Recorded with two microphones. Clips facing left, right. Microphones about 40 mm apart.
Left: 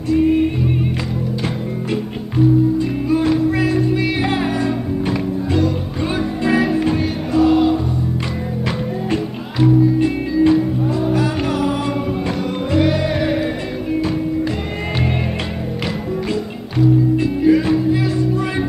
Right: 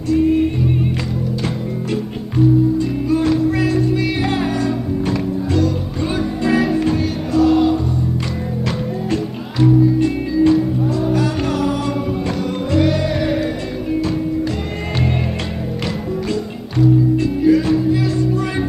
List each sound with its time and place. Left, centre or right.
0.1 s music: centre
2.3 s music: centre
16.7 s music: centre